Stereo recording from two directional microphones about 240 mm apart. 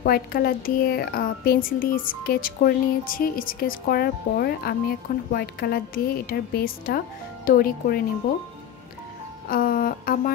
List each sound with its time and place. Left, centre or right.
0.0 s a woman's voice: left
9.5 s a woman's voice: left